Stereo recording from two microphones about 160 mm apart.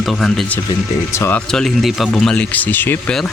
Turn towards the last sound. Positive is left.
turn(degrees=5)  # may be behind; listen again after turning